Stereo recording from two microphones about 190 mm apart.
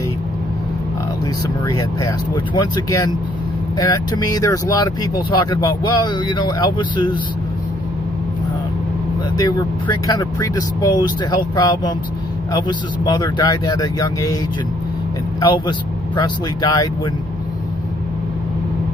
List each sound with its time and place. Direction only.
1.7 s speech: 15° left (ahead or behind)
9.4 s speech: 20° left (ahead or behind)
15.4 s speech: 25° left (ahead or behind)